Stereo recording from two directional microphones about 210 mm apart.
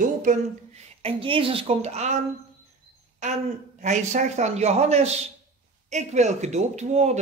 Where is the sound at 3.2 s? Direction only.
35° right (ahead or behind).